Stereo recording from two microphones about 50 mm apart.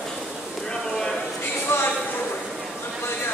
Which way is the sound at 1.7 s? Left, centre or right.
Left.